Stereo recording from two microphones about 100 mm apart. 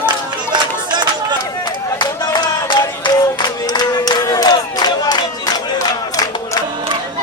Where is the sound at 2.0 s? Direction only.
50° left (ahead or behind).